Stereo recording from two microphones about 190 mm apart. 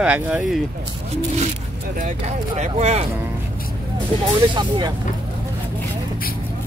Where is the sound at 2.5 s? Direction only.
35° right (ahead or behind).